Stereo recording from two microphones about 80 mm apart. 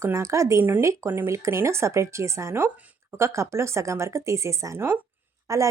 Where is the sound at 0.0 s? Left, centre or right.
Right.